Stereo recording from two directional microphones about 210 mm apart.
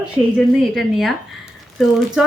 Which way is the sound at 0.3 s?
Centre (ahead or behind).